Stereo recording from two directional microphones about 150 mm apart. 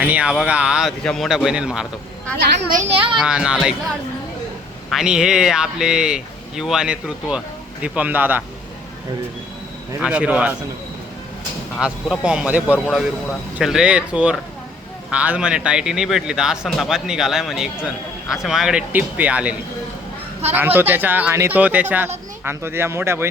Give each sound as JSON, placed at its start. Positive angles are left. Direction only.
{"t": 0.0, "sound": "speech", "side_deg": -10}
{"t": 2.8, "sound": "a child's voice", "side_deg": -40}
{"t": 3.2, "sound": "speech", "side_deg": -5}
{"t": 4.9, "sound": "speech", "side_deg": -5}
{"t": 10.0, "sound": "speech", "side_deg": -10}
{"t": 11.8, "sound": "speech", "side_deg": -5}